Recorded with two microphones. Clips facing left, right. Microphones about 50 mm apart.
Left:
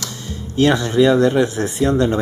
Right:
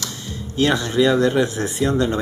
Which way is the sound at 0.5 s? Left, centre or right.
Left.